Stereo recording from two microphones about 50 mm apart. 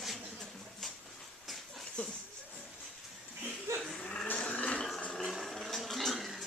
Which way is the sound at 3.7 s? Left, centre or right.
Right.